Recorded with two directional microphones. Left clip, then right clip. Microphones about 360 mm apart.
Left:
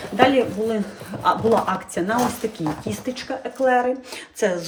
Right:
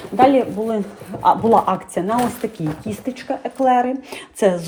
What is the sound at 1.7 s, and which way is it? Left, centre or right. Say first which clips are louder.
Speech: right 4 dB; centre.